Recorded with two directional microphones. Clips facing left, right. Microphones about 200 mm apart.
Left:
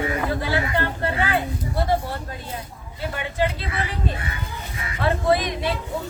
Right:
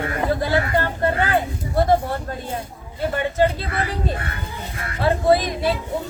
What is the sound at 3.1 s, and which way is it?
Speech, 45° right (ahead or behind).